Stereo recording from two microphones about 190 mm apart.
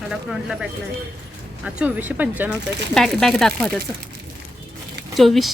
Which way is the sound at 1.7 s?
10° right (ahead or behind).